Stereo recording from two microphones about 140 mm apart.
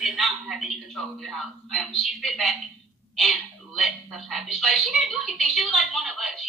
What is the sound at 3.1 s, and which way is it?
A woman's voice, centre (ahead or behind).